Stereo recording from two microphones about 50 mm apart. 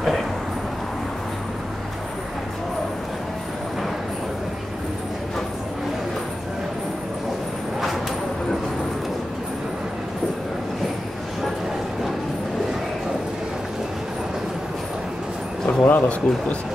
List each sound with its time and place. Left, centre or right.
15.8 s a man's voice: left